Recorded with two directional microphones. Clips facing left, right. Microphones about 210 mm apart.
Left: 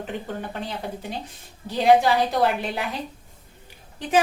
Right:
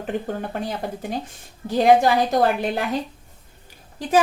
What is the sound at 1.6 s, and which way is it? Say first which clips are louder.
Speech: right 2 dB; 45° right (ahead or behind).